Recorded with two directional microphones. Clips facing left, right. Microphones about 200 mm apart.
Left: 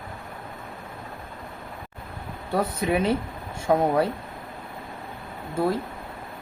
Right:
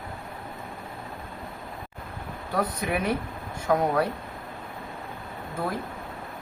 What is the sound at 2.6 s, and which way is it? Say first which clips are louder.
Speech: left 3 dB; 25° left (ahead or behind).